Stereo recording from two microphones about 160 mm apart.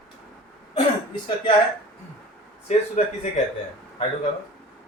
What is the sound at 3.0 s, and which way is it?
Speech, 50° left (ahead or behind).